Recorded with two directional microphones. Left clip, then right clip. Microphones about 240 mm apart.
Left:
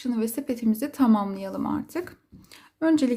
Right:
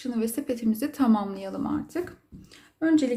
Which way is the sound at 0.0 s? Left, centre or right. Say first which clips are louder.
Left 1 dB; left.